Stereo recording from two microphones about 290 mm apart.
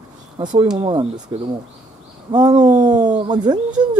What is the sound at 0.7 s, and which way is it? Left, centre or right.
Speech, centre.